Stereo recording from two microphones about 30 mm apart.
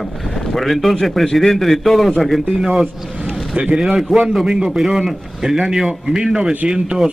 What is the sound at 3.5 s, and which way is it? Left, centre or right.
Speech, right.